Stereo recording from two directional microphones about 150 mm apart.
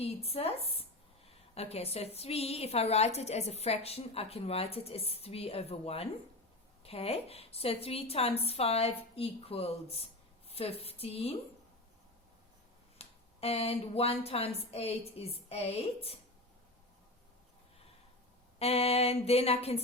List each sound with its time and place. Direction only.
0.0 s a woman's voice: 40° left (ahead or behind)
13.0 s a woman's voice: 40° left (ahead or behind)
18.6 s a woman's voice: 40° left (ahead or behind)